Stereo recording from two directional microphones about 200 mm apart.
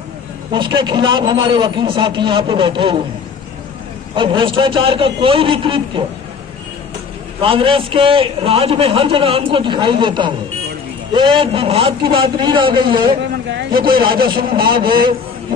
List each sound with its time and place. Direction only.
0.5 s a man's voice: 25° right (ahead or behind)
4.1 s a man's voice: 25° right (ahead or behind)
7.4 s a man's voice: 25° right (ahead or behind)
13.5 s a man's voice: 60° right (ahead or behind)
14.5 s a man's voice: 25° right (ahead or behind)